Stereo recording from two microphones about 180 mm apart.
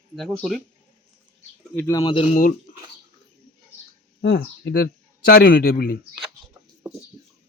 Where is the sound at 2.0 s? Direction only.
30° left (ahead or behind).